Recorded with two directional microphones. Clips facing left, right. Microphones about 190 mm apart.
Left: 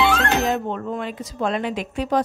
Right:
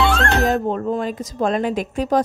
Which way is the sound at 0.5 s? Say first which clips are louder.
Right 4 dB; 40° right (ahead or behind).